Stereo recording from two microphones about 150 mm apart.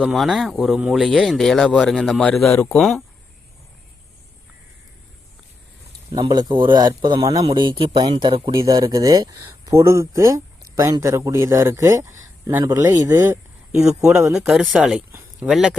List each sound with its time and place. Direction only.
0.0 s speech: centre (ahead or behind)
6.1 s speech: 30° right (ahead or behind)
8.5 s a man's voice: 25° right (ahead or behind)
13.8 s speech: 5° right (ahead or behind)